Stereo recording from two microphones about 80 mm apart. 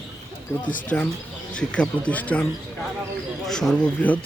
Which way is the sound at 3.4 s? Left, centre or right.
Centre.